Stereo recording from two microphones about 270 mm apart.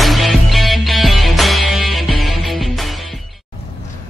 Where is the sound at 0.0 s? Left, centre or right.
Centre.